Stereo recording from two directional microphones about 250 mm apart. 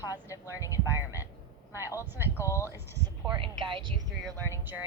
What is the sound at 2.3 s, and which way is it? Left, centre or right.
Speech, centre.